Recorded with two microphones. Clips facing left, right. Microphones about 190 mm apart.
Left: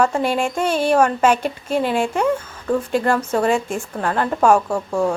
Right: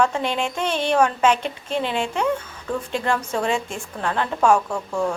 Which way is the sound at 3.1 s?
5° left (ahead or behind).